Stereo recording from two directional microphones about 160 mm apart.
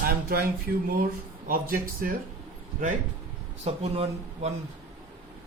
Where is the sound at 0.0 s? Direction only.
70° right (ahead or behind).